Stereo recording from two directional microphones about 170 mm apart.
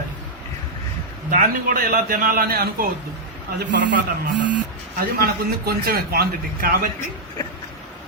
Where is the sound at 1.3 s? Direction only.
55° right (ahead or behind).